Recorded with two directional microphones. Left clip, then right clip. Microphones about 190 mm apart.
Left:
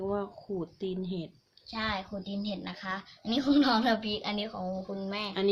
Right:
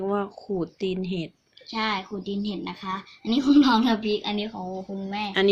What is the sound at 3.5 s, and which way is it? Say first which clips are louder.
Speech: right 6 dB; 50° left (ahead or behind).